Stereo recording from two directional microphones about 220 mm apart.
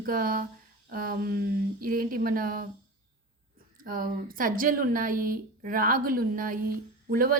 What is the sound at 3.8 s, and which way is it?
Speech, 40° right (ahead or behind).